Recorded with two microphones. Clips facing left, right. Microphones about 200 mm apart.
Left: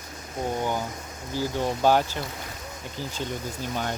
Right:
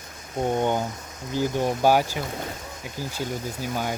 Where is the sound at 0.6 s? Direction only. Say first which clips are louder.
Right 4 dB; 25° right (ahead or behind).